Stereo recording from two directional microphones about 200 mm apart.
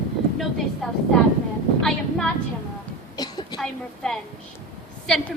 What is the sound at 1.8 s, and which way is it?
Speech, 5° left (ahead or behind).